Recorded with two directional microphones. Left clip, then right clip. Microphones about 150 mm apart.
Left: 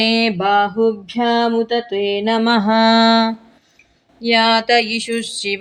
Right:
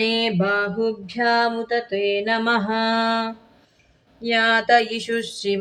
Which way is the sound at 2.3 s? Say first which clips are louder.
Left 5 dB; 35° left (ahead or behind).